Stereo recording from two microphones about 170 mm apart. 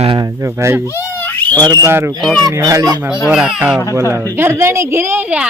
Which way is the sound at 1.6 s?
20° right (ahead or behind).